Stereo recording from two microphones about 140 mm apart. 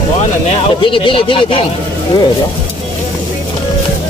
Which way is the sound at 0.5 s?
40° left (ahead or behind).